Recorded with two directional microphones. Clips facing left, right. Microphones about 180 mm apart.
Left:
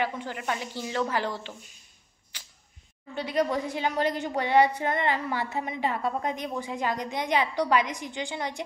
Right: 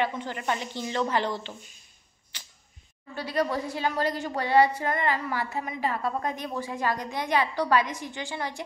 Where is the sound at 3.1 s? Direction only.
20° left (ahead or behind).